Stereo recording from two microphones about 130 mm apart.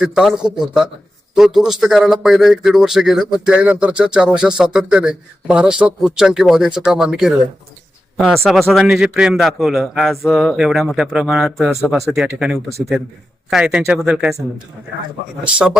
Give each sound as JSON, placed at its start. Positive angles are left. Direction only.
{"t": 0.0, "sound": "speech", "side_deg": -5}
{"t": 15.4, "sound": "speech", "side_deg": -10}